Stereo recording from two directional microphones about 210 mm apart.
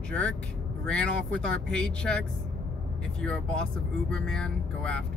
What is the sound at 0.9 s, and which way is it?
Speech, 5° left (ahead or behind).